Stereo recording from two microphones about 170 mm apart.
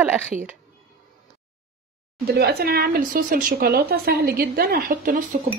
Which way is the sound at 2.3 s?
65° right (ahead or behind).